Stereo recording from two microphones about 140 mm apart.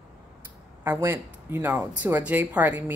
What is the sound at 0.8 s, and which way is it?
A woman's voice, 15° right (ahead or behind).